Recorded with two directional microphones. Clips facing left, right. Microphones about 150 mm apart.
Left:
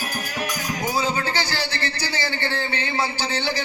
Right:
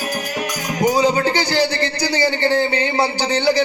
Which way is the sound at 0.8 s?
15° right (ahead or behind).